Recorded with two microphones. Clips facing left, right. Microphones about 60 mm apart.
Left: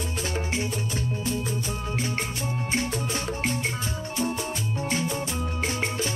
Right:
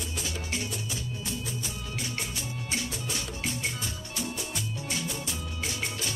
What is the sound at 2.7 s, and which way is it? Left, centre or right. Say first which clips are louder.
Music: left 6 dB; left.